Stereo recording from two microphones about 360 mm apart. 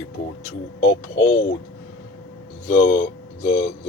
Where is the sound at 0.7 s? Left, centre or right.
Left.